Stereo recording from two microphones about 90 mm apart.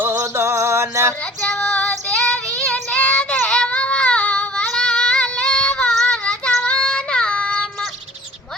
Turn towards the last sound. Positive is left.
turn(degrees=10)  # may be behind; listen again after turning